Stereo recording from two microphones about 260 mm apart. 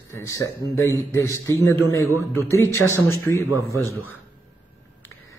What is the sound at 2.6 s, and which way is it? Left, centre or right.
Speech, centre.